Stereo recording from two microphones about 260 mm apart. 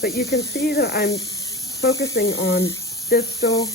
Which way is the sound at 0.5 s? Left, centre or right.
Left.